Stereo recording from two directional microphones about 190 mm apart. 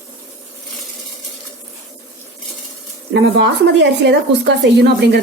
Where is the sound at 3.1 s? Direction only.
65° right (ahead or behind).